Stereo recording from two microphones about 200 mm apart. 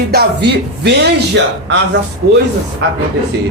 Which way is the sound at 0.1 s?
55° right (ahead or behind).